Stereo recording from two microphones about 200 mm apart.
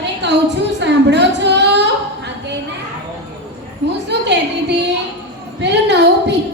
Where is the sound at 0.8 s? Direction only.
60° right (ahead or behind).